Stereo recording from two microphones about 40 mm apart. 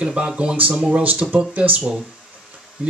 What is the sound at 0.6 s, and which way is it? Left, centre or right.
A man's voice, right.